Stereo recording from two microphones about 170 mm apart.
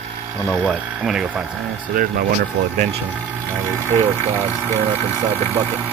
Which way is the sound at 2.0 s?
55° right (ahead or behind).